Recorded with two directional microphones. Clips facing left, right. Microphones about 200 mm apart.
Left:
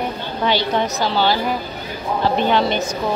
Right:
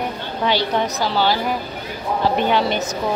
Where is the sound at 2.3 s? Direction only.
10° right (ahead or behind).